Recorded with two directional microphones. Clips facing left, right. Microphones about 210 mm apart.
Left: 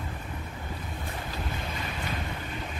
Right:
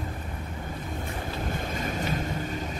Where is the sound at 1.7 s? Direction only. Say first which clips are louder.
Right 5 dB; 45° right (ahead or behind).